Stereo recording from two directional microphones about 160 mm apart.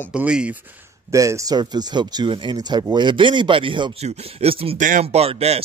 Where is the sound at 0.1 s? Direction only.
5° right (ahead or behind).